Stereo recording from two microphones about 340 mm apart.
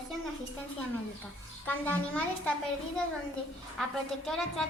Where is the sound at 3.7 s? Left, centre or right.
Centre.